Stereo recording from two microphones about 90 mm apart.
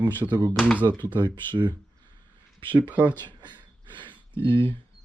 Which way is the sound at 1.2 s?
55° right (ahead or behind).